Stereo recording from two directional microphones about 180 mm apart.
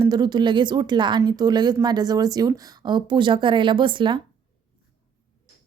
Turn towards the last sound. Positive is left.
turn(degrees=-25)  # may be behind; listen again after turning